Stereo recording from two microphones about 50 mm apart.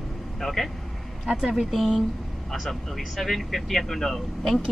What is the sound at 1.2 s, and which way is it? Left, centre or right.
Speech, centre.